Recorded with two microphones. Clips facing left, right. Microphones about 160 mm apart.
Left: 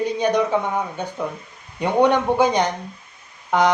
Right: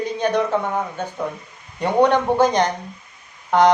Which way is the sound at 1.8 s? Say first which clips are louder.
Right 1 dB; 10° left (ahead or behind).